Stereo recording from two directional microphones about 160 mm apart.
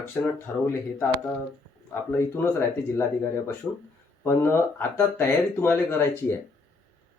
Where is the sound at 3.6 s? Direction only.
15° left (ahead or behind).